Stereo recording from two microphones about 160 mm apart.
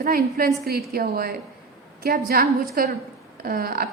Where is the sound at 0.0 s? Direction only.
70° right (ahead or behind).